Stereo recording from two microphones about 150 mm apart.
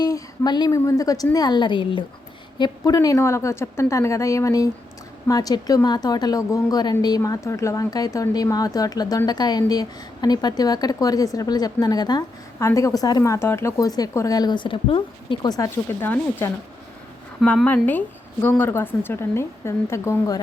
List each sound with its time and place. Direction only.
0.0 s a woman's voice: 25° left (ahead or behind)